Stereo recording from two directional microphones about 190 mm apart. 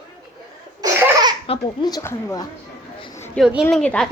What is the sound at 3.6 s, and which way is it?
Speech, 5° left (ahead or behind).